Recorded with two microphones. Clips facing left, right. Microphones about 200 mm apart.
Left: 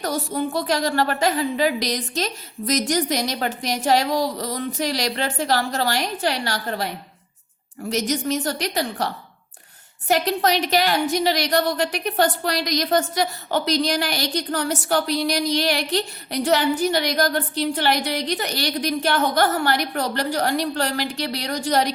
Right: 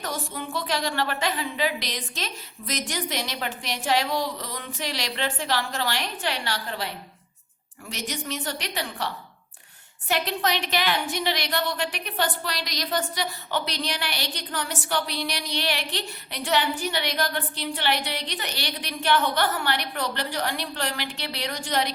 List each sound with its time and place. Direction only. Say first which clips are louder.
0.0 s a woman's voice: left 8 dB; 40° left (ahead or behind)